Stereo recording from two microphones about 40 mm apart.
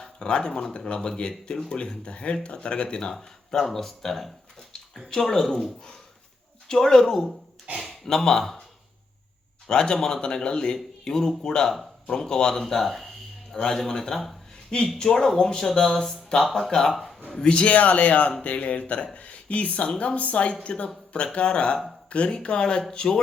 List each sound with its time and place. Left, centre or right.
0.0 s speech: left
3.2 s speech: centre
9.6 s speech: centre
12.6 s a sound: centre
13.6 s speech: centre
16.9 s a sound: centre
17.4 s speech: left